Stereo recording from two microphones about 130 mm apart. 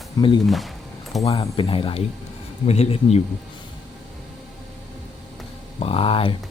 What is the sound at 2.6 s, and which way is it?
Speech, 55° left (ahead or behind).